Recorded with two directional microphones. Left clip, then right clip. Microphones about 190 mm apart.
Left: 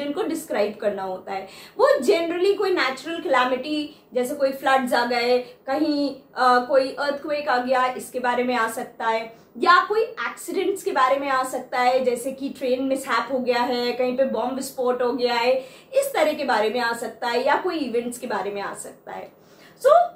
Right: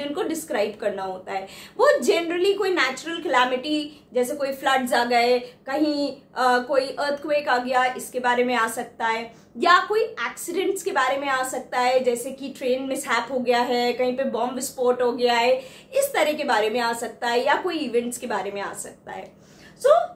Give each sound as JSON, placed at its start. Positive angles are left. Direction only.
{"t": 0.1, "sound": "a woman's voice", "side_deg": -25}